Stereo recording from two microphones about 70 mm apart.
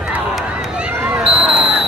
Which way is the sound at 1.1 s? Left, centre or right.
Centre.